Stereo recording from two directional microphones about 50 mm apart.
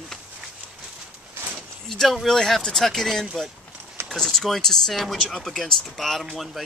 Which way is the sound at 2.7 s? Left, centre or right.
Centre.